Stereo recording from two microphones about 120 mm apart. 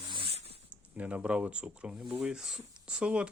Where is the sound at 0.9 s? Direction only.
10° right (ahead or behind).